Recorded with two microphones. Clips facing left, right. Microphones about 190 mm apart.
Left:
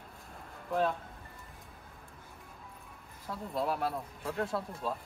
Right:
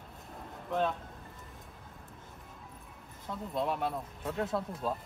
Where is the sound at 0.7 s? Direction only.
Centre (ahead or behind).